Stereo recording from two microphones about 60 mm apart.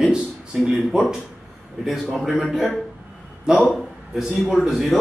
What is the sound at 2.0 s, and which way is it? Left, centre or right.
A man's voice, centre.